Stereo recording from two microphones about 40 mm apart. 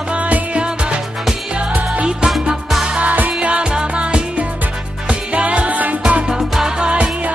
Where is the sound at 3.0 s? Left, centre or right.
Right.